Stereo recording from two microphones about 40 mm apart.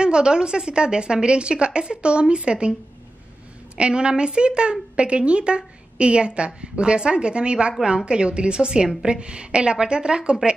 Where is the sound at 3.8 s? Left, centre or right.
Right.